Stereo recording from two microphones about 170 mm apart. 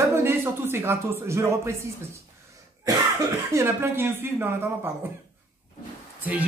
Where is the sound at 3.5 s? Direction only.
15° right (ahead or behind).